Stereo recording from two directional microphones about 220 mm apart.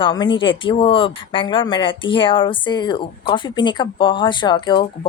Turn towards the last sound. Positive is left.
turn(degrees=20)  # may be behind; listen again after turning